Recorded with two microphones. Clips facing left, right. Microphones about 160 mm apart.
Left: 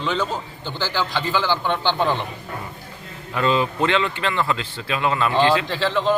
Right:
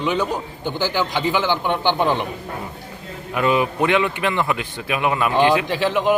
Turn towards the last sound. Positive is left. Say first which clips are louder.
# right 2 dB
turn(degrees=-15)  # may be behind; listen again after turning